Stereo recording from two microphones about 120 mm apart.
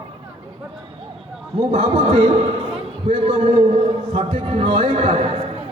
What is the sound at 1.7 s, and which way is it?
A man's voice, 55° right (ahead or behind).